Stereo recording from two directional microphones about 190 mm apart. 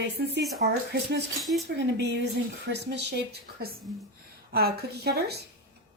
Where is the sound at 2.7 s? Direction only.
65° right (ahead or behind).